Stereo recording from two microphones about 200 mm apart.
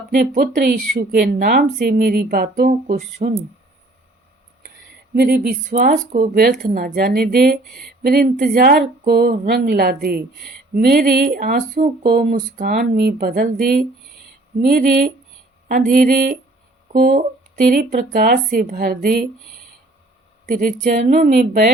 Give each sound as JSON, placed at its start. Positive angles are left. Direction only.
{"t": 0.1, "sound": "speech", "side_deg": -45}
{"t": 5.1, "sound": "speech", "side_deg": -50}
{"t": 20.5, "sound": "a woman's voice", "side_deg": -40}